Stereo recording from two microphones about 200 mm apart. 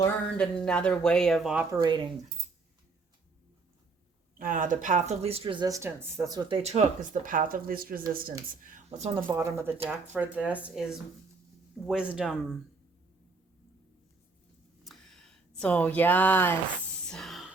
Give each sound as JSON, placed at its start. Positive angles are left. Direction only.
{"t": 0.0, "sound": "speech", "side_deg": 5}
{"t": 4.4, "sound": "speech", "side_deg": -40}
{"t": 6.6, "sound": "speech", "side_deg": -35}
{"t": 9.0, "sound": "speech", "side_deg": -30}
{"t": 9.2, "sound": "speech", "side_deg": -15}
{"t": 14.8, "sound": "a sound", "side_deg": 0}